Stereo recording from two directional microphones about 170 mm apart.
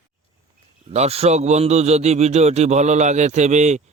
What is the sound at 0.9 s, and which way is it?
A man's voice, 40° right (ahead or behind).